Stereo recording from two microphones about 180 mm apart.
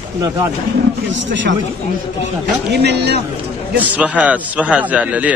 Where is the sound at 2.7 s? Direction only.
65° right (ahead or behind).